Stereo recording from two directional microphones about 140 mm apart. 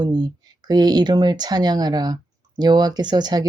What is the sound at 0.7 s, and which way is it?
Speech, 30° right (ahead or behind).